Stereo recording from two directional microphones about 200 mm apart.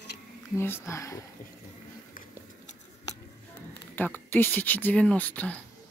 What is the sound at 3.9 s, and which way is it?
Speech, 10° left (ahead or behind).